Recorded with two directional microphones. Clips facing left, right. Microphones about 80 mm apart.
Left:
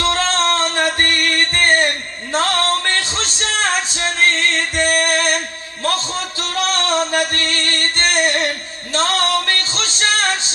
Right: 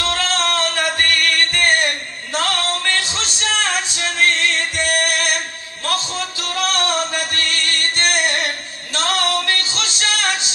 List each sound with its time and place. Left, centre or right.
0.0 s music: left
6.5 s music: left